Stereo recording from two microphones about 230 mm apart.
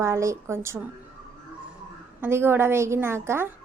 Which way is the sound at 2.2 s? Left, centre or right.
Centre.